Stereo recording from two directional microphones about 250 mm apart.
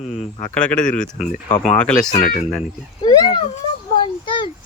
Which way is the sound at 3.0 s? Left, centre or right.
Centre.